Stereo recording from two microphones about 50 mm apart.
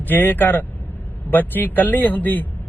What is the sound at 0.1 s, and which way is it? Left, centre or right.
Speech, left.